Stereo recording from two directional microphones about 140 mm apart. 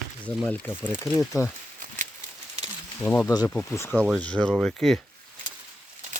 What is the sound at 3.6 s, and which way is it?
Speech, 20° left (ahead or behind).